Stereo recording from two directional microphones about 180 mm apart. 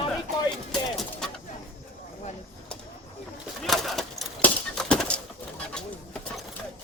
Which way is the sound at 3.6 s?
Centre (ahead or behind).